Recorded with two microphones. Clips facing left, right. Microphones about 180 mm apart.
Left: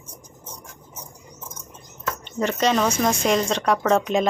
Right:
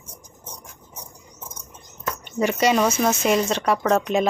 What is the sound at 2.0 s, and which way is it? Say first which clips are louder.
Speech: right 2 dB; 10° right (ahead or behind).